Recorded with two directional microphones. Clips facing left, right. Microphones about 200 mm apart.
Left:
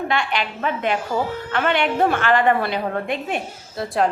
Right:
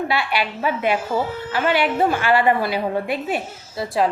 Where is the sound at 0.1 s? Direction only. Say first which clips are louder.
Right 1 dB; 5° right (ahead or behind).